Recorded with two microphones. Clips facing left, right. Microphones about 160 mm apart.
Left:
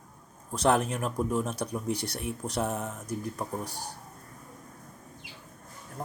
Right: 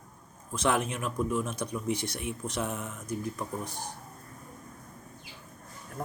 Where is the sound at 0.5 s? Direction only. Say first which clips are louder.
Left 3 dB; 35° left (ahead or behind).